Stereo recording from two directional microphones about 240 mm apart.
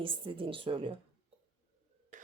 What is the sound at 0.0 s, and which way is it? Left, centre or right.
Speech, right.